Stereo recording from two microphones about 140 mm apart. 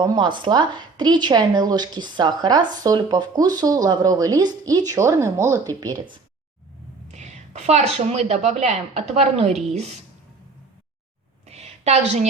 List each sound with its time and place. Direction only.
0.0 s a woman's voice: 30° right (ahead or behind)
7.1 s a woman's voice: 55° right (ahead or behind)
11.4 s a sound: 50° right (ahead or behind)